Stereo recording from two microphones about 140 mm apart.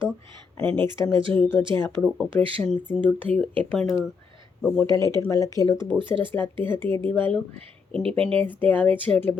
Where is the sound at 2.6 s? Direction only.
5° left (ahead or behind).